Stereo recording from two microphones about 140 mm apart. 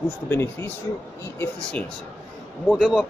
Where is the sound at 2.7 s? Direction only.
Centre (ahead or behind).